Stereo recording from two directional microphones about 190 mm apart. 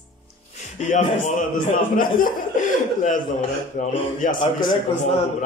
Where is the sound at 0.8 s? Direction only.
40° left (ahead or behind).